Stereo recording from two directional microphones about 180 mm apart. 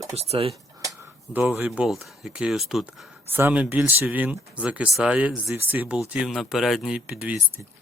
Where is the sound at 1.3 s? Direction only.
10° right (ahead or behind).